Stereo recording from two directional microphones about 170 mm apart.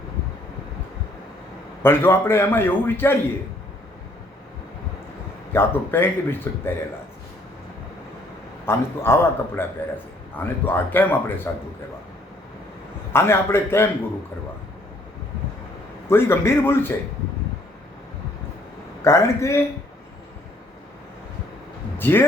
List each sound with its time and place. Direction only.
1.8 s a man's voice: 15° left (ahead or behind)
5.5 s a man's voice: 15° left (ahead or behind)
8.6 s a man's voice: 15° left (ahead or behind)
13.1 s a man's voice: 15° left (ahead or behind)
16.0 s a man's voice: 15° left (ahead or behind)
19.0 s a man's voice: 15° left (ahead or behind)
21.9 s speech: 10° left (ahead or behind)